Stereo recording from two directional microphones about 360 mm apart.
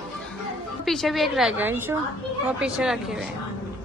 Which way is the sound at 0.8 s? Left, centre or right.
Centre.